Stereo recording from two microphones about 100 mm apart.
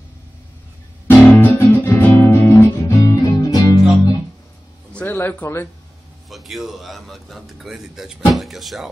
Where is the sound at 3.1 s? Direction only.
40° left (ahead or behind).